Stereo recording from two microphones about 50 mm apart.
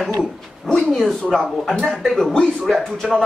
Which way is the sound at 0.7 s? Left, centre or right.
Centre.